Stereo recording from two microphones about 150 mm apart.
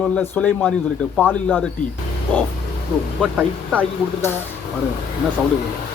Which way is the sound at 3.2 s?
5° right (ahead or behind).